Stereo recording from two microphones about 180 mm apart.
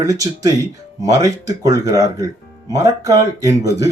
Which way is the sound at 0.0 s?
20° right (ahead or behind).